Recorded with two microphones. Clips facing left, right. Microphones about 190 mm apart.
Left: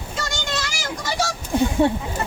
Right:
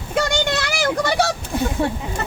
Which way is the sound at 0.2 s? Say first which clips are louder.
Right 8 dB; 60° right (ahead or behind).